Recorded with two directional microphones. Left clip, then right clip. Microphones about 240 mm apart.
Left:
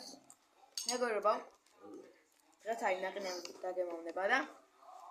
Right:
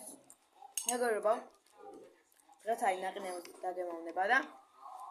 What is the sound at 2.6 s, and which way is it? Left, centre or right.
A woman's voice, centre.